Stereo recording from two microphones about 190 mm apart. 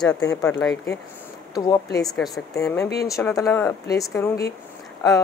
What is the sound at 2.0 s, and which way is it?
Speech, centre (ahead or behind).